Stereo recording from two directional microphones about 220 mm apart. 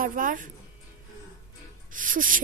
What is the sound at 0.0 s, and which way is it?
Speech, 40° right (ahead or behind).